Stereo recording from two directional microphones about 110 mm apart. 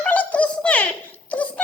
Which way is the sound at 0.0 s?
15° left (ahead or behind).